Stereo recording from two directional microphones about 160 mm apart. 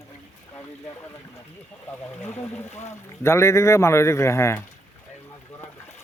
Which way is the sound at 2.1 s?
15° left (ahead or behind).